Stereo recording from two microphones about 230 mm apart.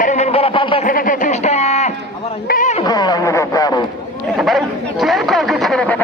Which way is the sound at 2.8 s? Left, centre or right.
Centre.